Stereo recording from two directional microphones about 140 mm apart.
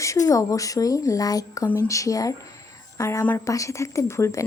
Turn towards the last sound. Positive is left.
turn(degrees=20)  # may be behind; listen again after turning